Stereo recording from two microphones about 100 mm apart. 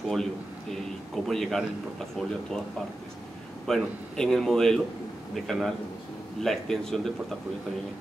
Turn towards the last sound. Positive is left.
turn(degrees=5)  # may be behind; listen again after turning